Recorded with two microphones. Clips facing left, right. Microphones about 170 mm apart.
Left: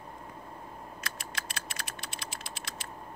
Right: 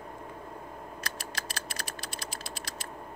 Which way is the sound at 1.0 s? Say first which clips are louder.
Right 2 dB; 35° right (ahead or behind).